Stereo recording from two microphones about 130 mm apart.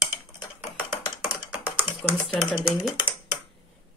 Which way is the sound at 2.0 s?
10° left (ahead or behind).